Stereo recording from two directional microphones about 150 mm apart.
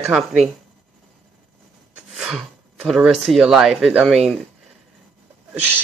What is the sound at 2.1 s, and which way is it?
Speech, 5° right (ahead or behind).